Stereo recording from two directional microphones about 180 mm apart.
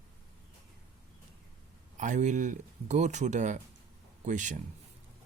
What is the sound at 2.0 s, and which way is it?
Speech, 45° right (ahead or behind).